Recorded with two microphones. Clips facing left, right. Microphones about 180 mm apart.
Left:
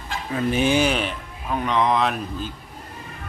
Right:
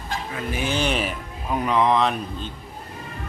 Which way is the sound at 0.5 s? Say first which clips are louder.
Left 6 dB; 20° left (ahead or behind).